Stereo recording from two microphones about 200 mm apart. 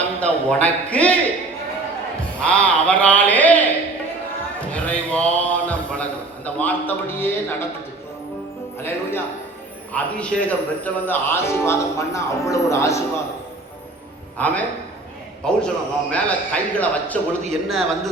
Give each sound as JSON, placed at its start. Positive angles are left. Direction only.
{"t": 0.2, "sound": "speech", "side_deg": 5}
{"t": 2.4, "sound": "speech", "side_deg": 5}
{"t": 4.7, "sound": "a sound", "side_deg": 5}
{"t": 8.8, "sound": "speech", "side_deg": 10}
{"t": 14.3, "sound": "a man's voice", "side_deg": 5}